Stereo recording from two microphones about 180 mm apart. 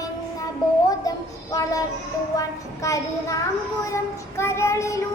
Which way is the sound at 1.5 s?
20° left (ahead or behind).